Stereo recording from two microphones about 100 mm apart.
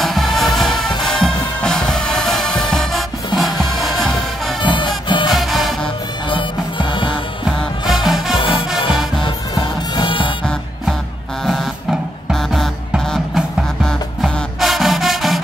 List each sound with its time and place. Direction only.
0.0 s music: centre (ahead or behind)
4.6 s music: 50° left (ahead or behind)
5.3 s music: centre (ahead or behind)
6.2 s music: 55° left (ahead or behind)
7.4 s music: centre (ahead or behind)
9.9 s music: 55° left (ahead or behind)
11.4 s music: centre (ahead or behind)
13.8 s music: centre (ahead or behind)